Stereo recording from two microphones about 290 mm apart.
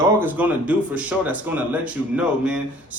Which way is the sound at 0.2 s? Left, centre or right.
Centre.